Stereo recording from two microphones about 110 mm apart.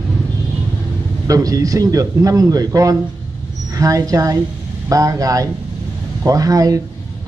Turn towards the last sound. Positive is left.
turn(degrees=-35)  # may be behind; listen again after turning